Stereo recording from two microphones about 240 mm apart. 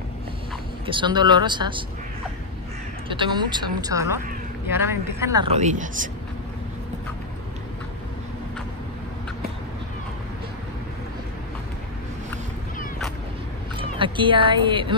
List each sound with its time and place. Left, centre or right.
0.8 s speech: centre
3.1 s speech: centre
5.5 s speech: right
13.7 s speech: right